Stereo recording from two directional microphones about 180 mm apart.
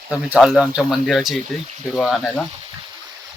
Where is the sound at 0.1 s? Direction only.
5° right (ahead or behind).